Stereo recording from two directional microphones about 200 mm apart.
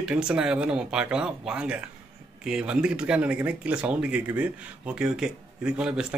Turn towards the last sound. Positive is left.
turn(degrees=-5)  # may be behind; listen again after turning